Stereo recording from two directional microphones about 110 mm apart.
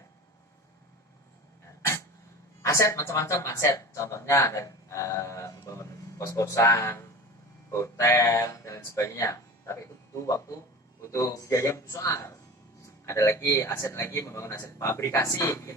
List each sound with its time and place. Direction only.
2.6 s speech: 25° left (ahead or behind)
6.7 s speech: 20° left (ahead or behind)